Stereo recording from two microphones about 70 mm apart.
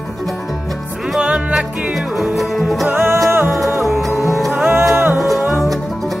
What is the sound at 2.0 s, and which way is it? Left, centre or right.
Music, centre.